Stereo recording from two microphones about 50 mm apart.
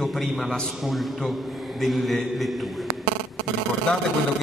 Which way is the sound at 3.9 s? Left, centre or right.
Left.